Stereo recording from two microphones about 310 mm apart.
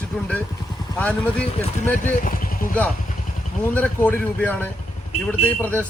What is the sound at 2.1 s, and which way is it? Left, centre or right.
Vehicle, left.